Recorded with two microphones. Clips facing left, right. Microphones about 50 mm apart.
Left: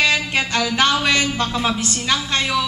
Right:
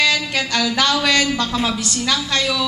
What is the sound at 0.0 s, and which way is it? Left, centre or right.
A woman's voice, left.